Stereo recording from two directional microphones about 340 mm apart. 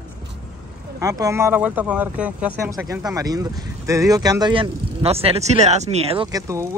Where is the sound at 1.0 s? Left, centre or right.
Centre.